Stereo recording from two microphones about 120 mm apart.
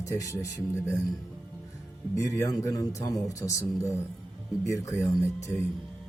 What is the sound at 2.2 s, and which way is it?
Speech, 25° left (ahead or behind).